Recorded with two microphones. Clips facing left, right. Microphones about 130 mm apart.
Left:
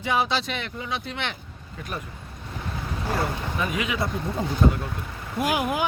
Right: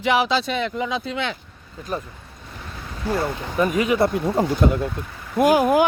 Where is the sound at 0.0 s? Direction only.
90° right.